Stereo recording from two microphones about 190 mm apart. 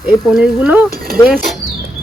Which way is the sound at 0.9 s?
50° right (ahead or behind).